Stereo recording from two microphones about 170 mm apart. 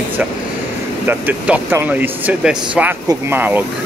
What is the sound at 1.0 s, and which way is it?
Speech, 10° right (ahead or behind).